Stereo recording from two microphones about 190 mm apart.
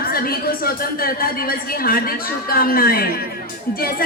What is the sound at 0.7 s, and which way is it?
Speech, 50° left (ahead or behind).